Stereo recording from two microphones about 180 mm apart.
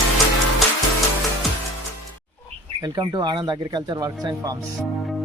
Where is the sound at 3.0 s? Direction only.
25° right (ahead or behind).